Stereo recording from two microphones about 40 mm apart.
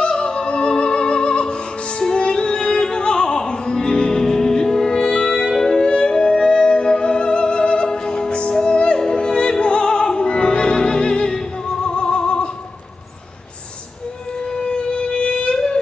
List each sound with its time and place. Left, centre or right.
0.0 s music: left
14.5 s music: left